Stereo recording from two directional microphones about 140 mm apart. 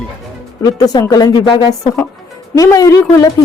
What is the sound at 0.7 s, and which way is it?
A woman's voice, 25° left (ahead or behind).